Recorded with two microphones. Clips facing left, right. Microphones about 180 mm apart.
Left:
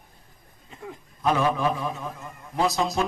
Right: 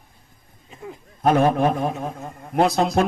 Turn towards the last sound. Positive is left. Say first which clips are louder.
# right 6 dB
turn(degrees=-55)  # may be behind; listen again after turning